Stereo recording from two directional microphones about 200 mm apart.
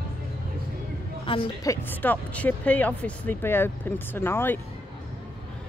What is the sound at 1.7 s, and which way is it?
Speech, 10° left (ahead or behind).